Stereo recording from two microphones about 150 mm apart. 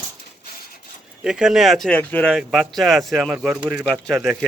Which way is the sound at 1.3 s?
5° right (ahead or behind).